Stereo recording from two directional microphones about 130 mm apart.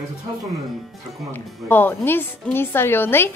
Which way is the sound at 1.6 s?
15° left (ahead or behind).